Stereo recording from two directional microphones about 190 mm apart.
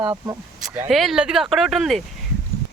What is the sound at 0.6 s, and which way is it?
Speech, 5° right (ahead or behind).